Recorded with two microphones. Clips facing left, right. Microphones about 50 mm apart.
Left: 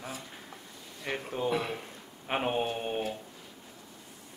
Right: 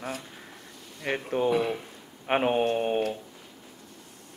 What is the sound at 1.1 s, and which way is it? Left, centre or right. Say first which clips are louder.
Speech: right 5 dB; right.